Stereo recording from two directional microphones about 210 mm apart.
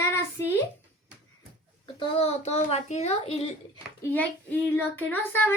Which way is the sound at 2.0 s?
30° left (ahead or behind).